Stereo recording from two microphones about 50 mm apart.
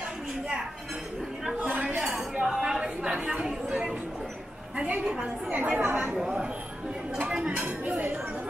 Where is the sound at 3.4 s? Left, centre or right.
Centre.